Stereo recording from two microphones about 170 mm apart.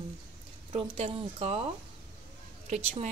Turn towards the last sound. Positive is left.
turn(degrees=-40)  # may be behind; listen again after turning